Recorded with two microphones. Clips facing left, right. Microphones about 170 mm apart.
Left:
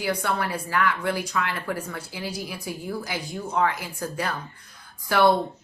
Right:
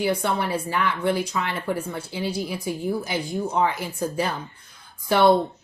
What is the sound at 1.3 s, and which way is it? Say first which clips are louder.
Speech: even; 20° right (ahead or behind).